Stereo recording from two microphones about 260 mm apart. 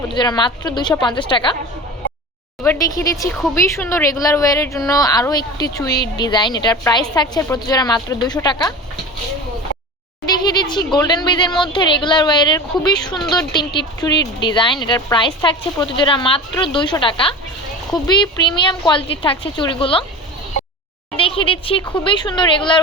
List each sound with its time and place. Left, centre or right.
0.1 s a woman's voice: centre
2.6 s a woman's voice: centre
10.2 s a woman's voice: centre
13.1 s a woman's voice: centre
13.5 s a woman's voice: centre
21.2 s speech: left